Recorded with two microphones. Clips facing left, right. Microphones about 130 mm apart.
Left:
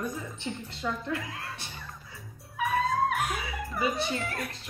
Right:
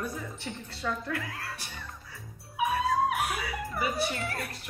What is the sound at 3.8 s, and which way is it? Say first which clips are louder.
Speech: left 2 dB; 25° left (ahead or behind).